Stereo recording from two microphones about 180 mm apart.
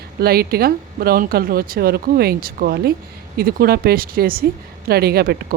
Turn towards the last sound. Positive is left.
turn(degrees=-60)  # may be behind; listen again after turning